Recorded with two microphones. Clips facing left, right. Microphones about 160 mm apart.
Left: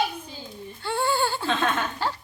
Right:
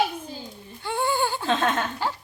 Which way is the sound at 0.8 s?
15° right (ahead or behind).